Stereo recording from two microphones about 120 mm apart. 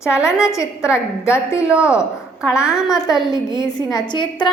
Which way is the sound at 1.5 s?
10° right (ahead or behind).